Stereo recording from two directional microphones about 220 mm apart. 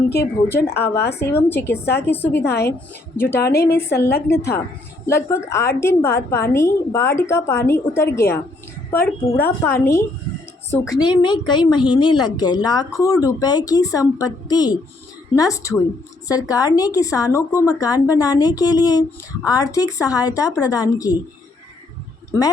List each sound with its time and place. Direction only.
0.1 s speech: 10° left (ahead or behind)
0.8 s a woman's voice: 45° left (ahead or behind)
1.4 s speech: 10° left (ahead or behind)
22.3 s speech: 15° left (ahead or behind)